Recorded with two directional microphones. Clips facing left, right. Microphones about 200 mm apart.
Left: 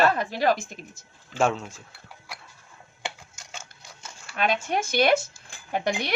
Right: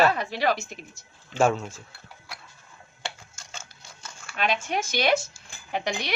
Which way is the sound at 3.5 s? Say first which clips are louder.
Left 1 dB; 15° left (ahead or behind).